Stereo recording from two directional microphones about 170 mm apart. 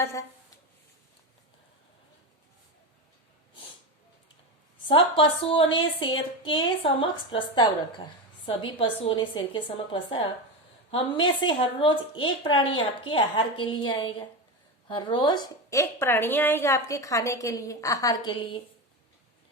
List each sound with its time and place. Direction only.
0.0 s a woman's voice: 15° left (ahead or behind)
4.9 s a woman's voice: 30° left (ahead or behind)